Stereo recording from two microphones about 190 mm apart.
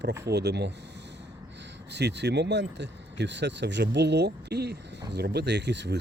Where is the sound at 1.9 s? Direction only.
60° right (ahead or behind).